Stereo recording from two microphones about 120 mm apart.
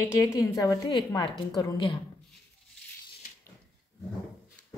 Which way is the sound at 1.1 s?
40° left (ahead or behind).